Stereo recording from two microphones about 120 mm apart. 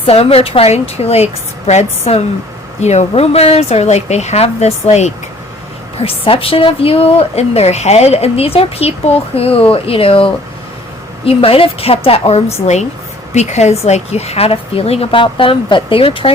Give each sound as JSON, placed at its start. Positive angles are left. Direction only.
{"t": 0.0, "sound": "speech", "side_deg": 55}
{"t": 6.0, "sound": "a woman's voice", "side_deg": 50}
{"t": 11.3, "sound": "a woman's voice", "side_deg": 50}
{"t": 13.3, "sound": "speech", "side_deg": 70}